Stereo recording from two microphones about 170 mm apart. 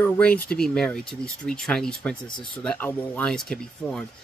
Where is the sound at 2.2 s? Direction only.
30° left (ahead or behind).